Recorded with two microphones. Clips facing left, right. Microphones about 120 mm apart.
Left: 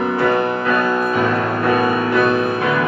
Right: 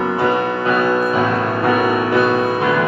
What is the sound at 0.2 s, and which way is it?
Music, 20° right (ahead or behind).